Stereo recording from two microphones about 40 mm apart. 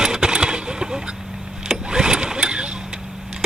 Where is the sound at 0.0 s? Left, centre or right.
Right.